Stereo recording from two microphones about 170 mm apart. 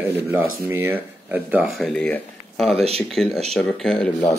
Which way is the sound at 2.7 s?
35° right (ahead or behind).